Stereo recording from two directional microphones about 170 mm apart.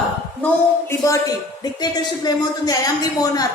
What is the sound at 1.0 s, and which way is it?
A woman's voice, 20° left (ahead or behind).